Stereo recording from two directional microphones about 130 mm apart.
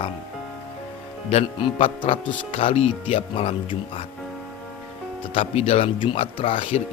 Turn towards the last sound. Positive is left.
turn(degrees=45)  # may be behind; listen again after turning